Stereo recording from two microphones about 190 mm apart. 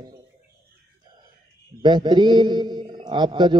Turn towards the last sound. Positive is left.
turn(degrees=-25)  # may be behind; listen again after turning